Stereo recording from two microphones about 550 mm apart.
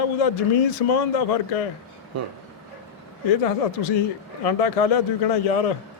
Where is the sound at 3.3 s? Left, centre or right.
Left.